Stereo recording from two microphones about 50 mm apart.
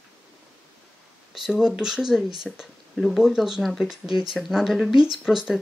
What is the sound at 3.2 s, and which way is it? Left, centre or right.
Speech, centre.